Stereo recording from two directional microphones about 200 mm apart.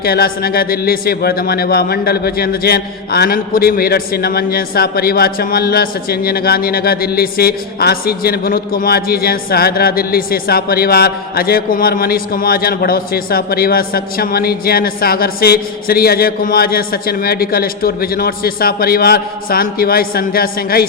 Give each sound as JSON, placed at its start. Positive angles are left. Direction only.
{"t": 0.0, "sound": "speech", "side_deg": 50}